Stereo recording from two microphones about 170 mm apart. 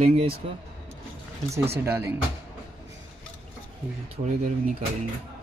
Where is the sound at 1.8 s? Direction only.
15° right (ahead or behind).